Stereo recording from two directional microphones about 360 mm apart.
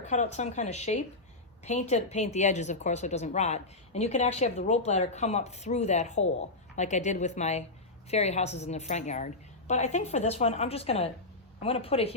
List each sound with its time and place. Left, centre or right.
0.1 s a woman's voice: centre